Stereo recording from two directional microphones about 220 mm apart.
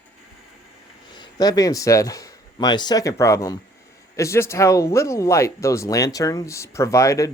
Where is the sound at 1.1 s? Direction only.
20° left (ahead or behind).